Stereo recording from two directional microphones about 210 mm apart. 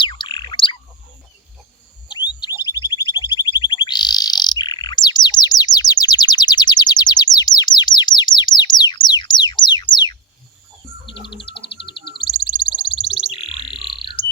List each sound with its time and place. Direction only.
0.0 s chirp: 25° left (ahead or behind)
2.0 s bird: 20° left (ahead or behind)
9.0 s music: 20° left (ahead or behind)
12.2 s a sound: 20° left (ahead or behind)
13.8 s frog: 20° left (ahead or behind)